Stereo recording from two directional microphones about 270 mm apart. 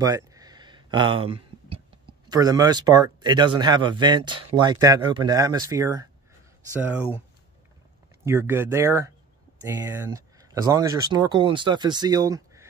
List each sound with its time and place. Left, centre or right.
0.0 s speech: centre
8.3 s speech: centre